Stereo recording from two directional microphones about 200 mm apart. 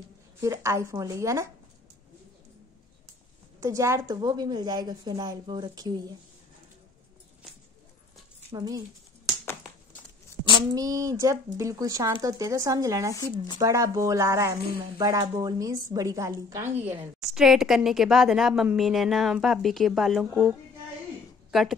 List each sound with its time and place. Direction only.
0.4 s speech: 15° right (ahead or behind)
3.6 s speech: 15° right (ahead or behind)
8.5 s speech: 20° right (ahead or behind)
10.5 s speech: 20° right (ahead or behind)
16.8 s a woman's voice: centre (ahead or behind)